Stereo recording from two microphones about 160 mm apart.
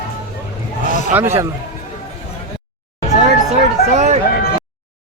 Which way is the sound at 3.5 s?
45° right (ahead or behind).